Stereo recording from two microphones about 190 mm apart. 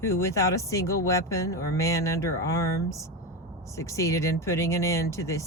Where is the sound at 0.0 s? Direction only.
15° left (ahead or behind).